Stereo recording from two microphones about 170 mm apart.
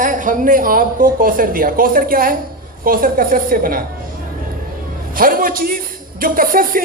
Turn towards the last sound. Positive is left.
turn(degrees=-55)  # may be behind; listen again after turning